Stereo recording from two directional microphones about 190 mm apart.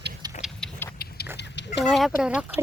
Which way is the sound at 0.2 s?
20° right (ahead or behind).